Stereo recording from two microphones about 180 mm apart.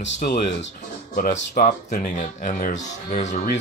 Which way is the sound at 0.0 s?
65° left (ahead or behind).